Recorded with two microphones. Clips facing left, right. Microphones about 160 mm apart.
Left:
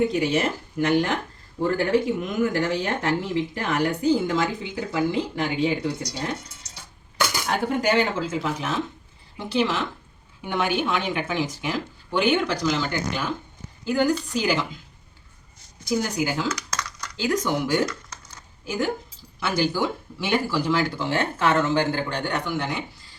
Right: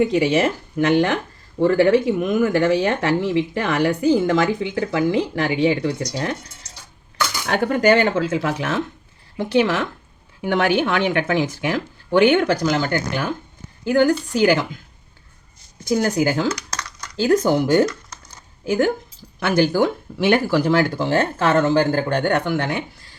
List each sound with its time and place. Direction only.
0.1 s speech: 80° right
7.4 s speech: 65° right (ahead or behind)
9.4 s speech: 60° right (ahead or behind)
10.4 s speech: 75° right (ahead or behind); by 14.7 s 60° right (ahead or behind)
16.0 s speech: 50° right (ahead or behind)
16.5 s dishes: 25° right (ahead or behind)
17.2 s speech: 45° right (ahead or behind)
18.6 s speech: 55° right (ahead or behind)